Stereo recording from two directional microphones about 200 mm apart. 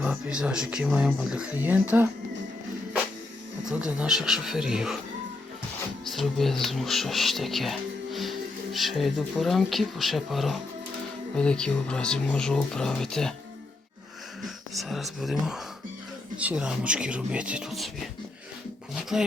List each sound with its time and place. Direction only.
0.0 s speech: 5° right (ahead or behind)
3.7 s speech: 5° right (ahead or behind)
6.1 s speech: centre (ahead or behind)
14.4 s speech: centre (ahead or behind)